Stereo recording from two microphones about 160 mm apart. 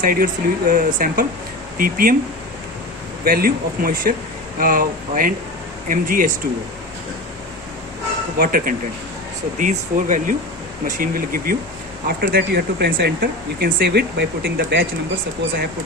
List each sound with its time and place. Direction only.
0.0 s speech: 60° right (ahead or behind)
3.2 s speech: 65° right (ahead or behind)
8.4 s speech: 60° right (ahead or behind)
12.0 s speech: 80° right